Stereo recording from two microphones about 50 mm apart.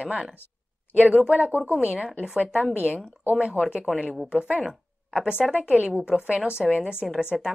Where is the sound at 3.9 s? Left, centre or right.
Centre.